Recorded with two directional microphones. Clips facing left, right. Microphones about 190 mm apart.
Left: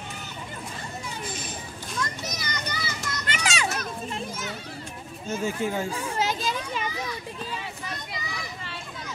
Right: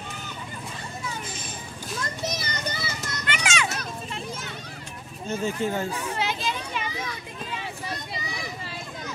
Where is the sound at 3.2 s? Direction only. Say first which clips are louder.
Right 1 dB; 35° left (ahead or behind).